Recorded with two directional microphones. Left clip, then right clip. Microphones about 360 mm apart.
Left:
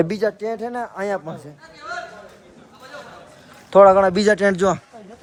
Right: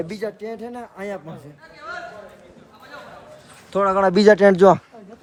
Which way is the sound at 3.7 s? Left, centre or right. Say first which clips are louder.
Left 6 dB; centre.